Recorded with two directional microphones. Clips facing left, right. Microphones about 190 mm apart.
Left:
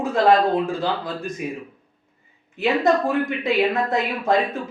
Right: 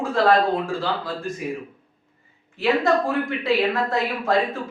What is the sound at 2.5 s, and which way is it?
A man's voice, 20° left (ahead or behind).